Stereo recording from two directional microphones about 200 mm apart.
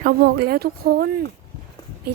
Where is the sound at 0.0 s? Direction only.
50° right (ahead or behind).